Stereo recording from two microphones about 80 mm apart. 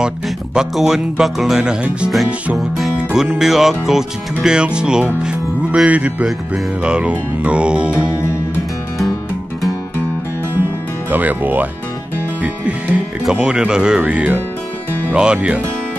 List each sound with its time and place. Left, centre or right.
0.6 s speech: centre
3.0 s music: centre
11.1 s speech: right
13.2 s music: centre